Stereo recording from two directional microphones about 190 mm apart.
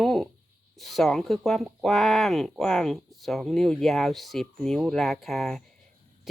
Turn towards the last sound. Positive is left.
turn(degrees=0)  # may be behind; listen again after turning